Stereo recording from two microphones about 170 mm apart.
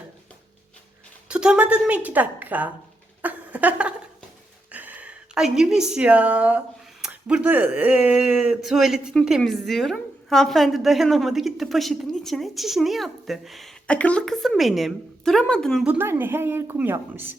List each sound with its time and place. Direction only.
1.3 s a woman's voice: 5° right (ahead or behind)
3.2 s a sound: 10° right (ahead or behind)
4.7 s a woman's voice: 10° right (ahead or behind)
15.9 s a woman's voice: 10° right (ahead or behind)